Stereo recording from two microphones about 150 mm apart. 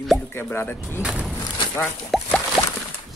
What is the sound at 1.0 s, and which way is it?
Speech, 5° right (ahead or behind).